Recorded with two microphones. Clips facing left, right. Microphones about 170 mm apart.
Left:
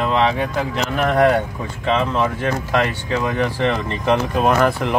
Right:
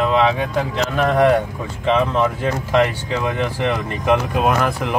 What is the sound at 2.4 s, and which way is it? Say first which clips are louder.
Speech: right 2 dB; 15° right (ahead or behind).